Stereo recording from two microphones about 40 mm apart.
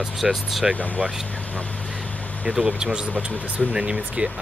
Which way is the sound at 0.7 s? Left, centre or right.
Left.